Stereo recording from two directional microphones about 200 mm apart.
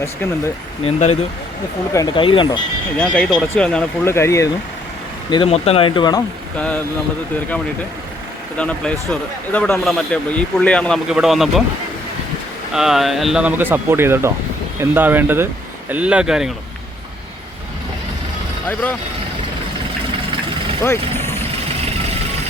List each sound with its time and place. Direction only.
0.9 s speech: 35° left (ahead or behind)
1.9 s speech: 20° left (ahead or behind)
3.0 s speech: 5° left (ahead or behind)
5.3 s speech: 30° left (ahead or behind)
8.5 s speech: 5° left (ahead or behind)
12.7 s speech: centre (ahead or behind)
18.7 s speech: 10° left (ahead or behind)
20.8 s vehicle: 10° left (ahead or behind)